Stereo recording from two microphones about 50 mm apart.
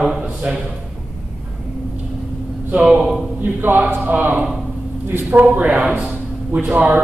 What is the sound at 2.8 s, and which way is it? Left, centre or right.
Speech, centre.